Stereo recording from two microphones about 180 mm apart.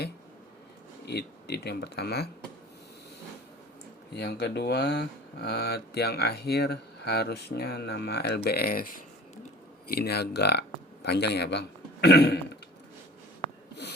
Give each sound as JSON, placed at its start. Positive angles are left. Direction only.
{"t": 1.0, "sound": "speech", "side_deg": 65}
{"t": 4.1, "sound": "speech", "side_deg": 65}
{"t": 9.9, "sound": "speech", "side_deg": 60}